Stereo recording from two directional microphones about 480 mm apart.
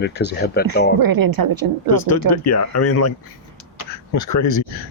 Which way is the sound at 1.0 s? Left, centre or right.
Right.